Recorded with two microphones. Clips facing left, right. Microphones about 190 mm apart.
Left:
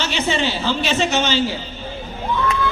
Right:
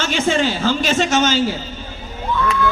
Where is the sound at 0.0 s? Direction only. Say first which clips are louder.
Right 3 dB; 45° right (ahead or behind).